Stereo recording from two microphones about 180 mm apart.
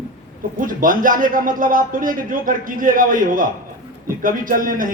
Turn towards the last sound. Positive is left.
turn(degrees=-50)  # may be behind; listen again after turning